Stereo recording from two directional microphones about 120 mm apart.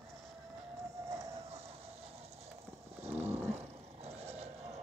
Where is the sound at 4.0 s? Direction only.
60° right (ahead or behind).